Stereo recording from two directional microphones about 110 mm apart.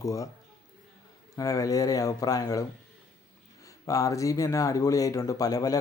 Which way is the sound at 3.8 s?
30° left (ahead or behind).